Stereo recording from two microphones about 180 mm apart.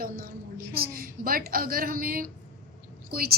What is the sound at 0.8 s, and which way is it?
A woman's voice, 55° right (ahead or behind).